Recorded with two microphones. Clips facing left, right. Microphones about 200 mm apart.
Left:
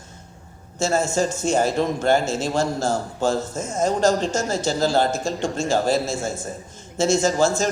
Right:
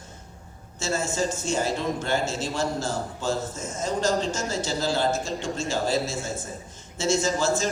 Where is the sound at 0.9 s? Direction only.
55° left (ahead or behind).